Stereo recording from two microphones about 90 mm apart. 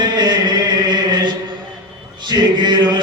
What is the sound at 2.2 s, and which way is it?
Male singing, 55° right (ahead or behind).